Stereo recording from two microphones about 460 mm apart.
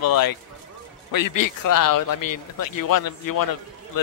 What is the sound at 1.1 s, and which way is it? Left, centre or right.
A man's voice, left.